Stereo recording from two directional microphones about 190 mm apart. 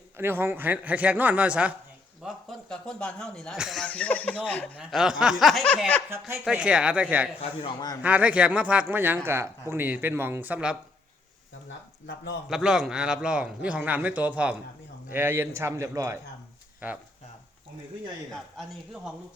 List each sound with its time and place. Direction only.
0.2 s a man's voice: 10° right (ahead or behind); by 6.0 s 5° left (ahead or behind)
6.1 s a man's voice: 10° right (ahead or behind)
7.6 s a man's voice: 20° left (ahead or behind)
8.0 s a man's voice: 5° right (ahead or behind)
12.0 s a man's voice: 70° left (ahead or behind)
12.5 s a man's voice: 5° right (ahead or behind)